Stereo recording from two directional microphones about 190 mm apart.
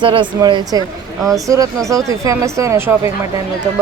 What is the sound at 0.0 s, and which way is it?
Speech, 25° right (ahead or behind).